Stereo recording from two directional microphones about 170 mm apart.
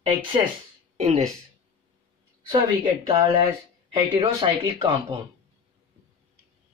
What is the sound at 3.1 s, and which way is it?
Speech, 25° right (ahead or behind).